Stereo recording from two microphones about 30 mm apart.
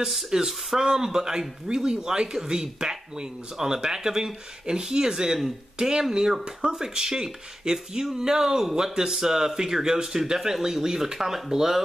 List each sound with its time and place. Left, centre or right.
0.3 s speech: right